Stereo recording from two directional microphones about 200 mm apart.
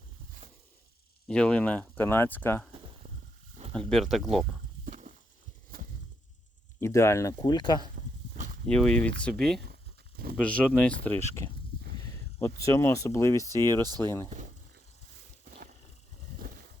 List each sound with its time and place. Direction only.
1.3 s speech: 5° left (ahead or behind)
3.7 s speech: 5° left (ahead or behind)
4.9 s a sound: 40° right (ahead or behind)
6.7 s speech: 15° left (ahead or behind)
8.6 s speech: 5° left (ahead or behind)
15.4 s a sound: 45° right (ahead or behind)